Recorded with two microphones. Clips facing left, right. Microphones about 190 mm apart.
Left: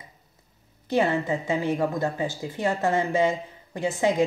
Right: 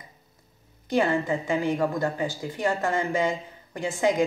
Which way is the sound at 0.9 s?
25° left (ahead or behind).